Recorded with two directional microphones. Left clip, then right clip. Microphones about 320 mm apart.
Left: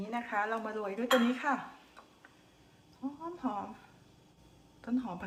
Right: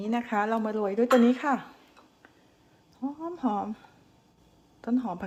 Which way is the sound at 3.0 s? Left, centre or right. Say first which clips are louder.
Right 7 dB; right.